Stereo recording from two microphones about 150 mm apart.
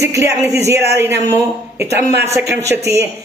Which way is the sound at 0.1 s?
20° right (ahead or behind).